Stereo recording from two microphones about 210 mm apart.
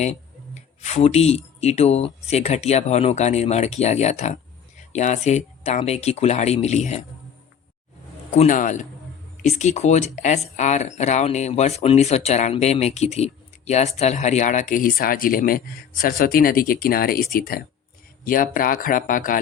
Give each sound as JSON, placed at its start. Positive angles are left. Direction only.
{"t": 0.8, "sound": "speech", "side_deg": 30}
{"t": 8.3, "sound": "speech", "side_deg": 35}